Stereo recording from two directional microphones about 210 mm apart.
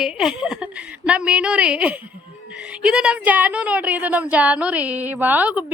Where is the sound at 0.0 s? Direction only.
5° right (ahead or behind).